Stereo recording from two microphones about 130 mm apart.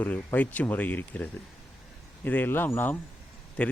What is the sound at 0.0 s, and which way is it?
A man's voice, 10° left (ahead or behind).